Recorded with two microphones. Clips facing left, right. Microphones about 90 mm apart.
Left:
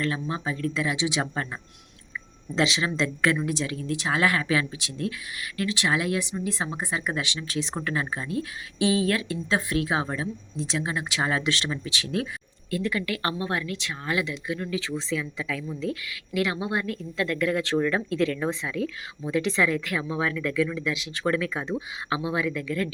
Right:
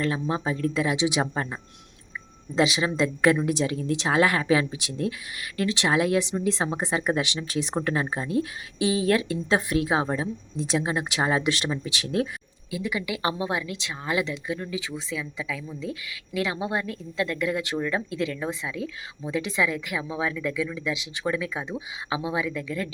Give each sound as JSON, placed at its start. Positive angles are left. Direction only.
{"t": 0.0, "sound": "speech", "side_deg": -25}
{"t": 2.9, "sound": "speech", "side_deg": -15}
{"t": 3.5, "sound": "speech", "side_deg": -25}
{"t": 12.0, "sound": "speech", "side_deg": -35}
{"t": 12.7, "sound": "speech", "side_deg": -10}